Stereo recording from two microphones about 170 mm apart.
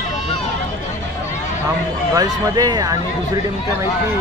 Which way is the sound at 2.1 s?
20° right (ahead or behind).